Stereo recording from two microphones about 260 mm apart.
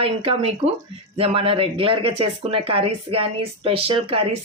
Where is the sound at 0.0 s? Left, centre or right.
Right.